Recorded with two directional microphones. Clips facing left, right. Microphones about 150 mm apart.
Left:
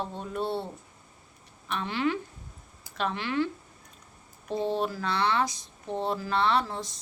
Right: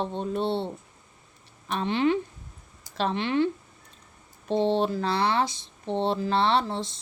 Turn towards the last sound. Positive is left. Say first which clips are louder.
# right 3 dB
turn(degrees=-30)  # may be behind; listen again after turning